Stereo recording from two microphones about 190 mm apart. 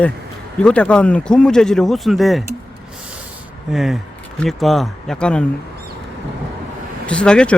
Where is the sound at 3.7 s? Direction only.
Centre (ahead or behind).